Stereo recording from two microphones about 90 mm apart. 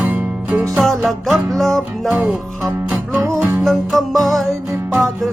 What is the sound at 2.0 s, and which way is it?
Music, 15° right (ahead or behind).